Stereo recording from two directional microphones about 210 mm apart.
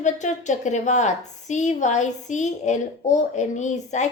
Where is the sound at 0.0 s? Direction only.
35° left (ahead or behind).